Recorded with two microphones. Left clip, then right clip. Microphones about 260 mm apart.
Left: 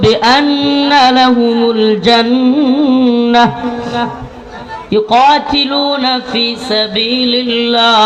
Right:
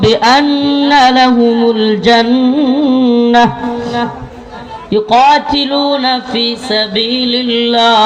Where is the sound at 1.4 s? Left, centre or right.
Right.